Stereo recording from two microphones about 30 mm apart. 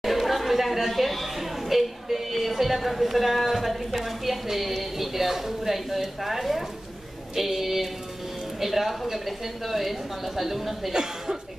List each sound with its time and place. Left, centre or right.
0.0 s a woman's voice: centre
10.9 s speech: right